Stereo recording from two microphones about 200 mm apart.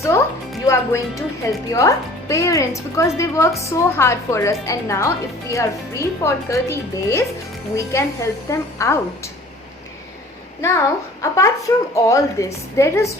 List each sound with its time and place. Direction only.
0.1 s music: 10° left (ahead or behind)
0.6 s speech: 15° left (ahead or behind)
10.6 s speech: 15° left (ahead or behind)